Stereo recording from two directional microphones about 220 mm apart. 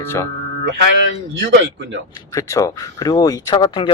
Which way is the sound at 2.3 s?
15° left (ahead or behind).